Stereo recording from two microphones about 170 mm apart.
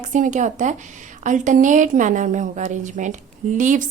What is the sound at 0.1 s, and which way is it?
A woman's voice, 45° right (ahead or behind).